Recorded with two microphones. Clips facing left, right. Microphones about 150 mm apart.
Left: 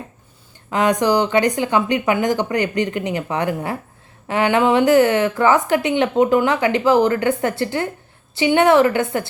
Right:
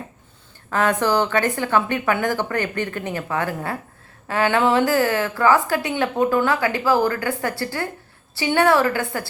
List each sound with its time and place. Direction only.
0.7 s a woman's voice: 15° left (ahead or behind)